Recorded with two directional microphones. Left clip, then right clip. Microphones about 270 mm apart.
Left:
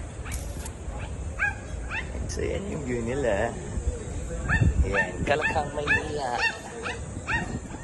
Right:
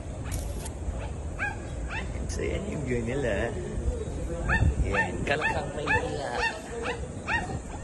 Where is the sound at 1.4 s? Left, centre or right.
Right.